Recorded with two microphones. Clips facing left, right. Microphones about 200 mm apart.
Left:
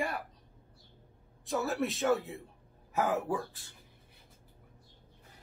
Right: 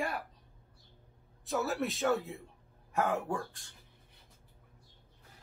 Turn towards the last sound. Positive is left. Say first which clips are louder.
# left 2 dB
turn(degrees=5)  # may be behind; listen again after turning